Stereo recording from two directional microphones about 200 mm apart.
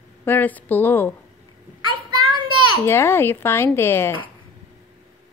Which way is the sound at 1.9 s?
25° right (ahead or behind).